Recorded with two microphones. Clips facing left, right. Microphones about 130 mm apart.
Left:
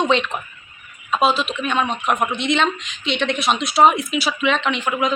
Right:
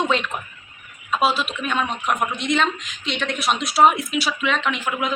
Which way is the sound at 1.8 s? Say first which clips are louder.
Left 3 dB; 25° left (ahead or behind).